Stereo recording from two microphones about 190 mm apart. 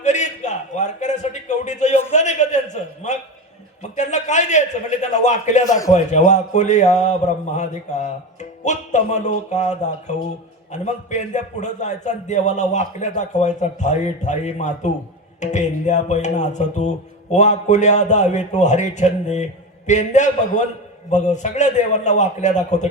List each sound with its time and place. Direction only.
0.0 s a sound: 40° left (ahead or behind)
3.9 s a man's voice: 40° left (ahead or behind)
5.6 s a man's voice: 20° left (ahead or behind)
5.9 s a man's voice: 40° left (ahead or behind)